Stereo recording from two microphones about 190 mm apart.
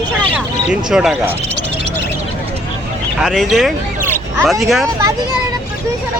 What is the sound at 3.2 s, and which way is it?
Speech, centre (ahead or behind).